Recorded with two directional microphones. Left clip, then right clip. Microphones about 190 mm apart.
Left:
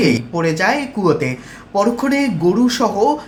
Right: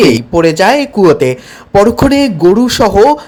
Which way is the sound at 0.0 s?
40° right (ahead or behind).